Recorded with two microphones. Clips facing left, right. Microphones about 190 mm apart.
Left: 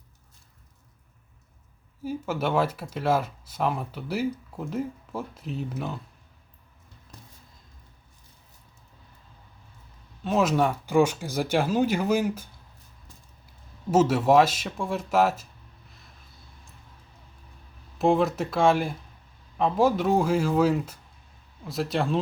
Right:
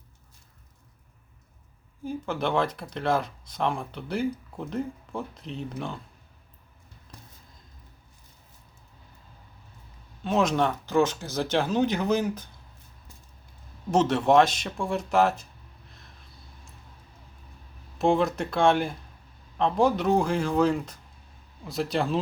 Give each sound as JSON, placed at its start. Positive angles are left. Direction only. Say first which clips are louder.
{"t": 2.0, "sound": "speech", "louder": "left 1 dB", "side_deg": 5}
{"t": 10.2, "sound": "speech", "louder": "left 1 dB", "side_deg": 5}
{"t": 13.9, "sound": "speech", "louder": "left 1 dB", "side_deg": 5}
{"t": 17.9, "sound": "speech", "louder": "left 1 dB", "side_deg": 0}